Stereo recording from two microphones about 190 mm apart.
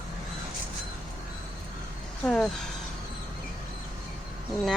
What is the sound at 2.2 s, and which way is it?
Speech, 5° left (ahead or behind).